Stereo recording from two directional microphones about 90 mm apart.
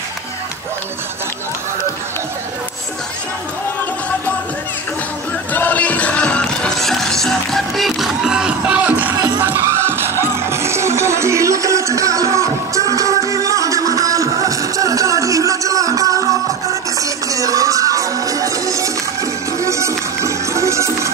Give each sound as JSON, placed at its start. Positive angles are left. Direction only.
{"t": 5.5, "sound": "music", "side_deg": 20}